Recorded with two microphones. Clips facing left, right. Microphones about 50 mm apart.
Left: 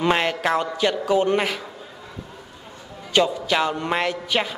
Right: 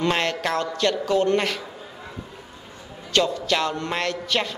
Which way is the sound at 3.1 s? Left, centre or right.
Centre.